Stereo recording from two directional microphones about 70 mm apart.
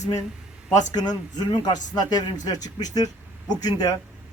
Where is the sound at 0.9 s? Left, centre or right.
Left.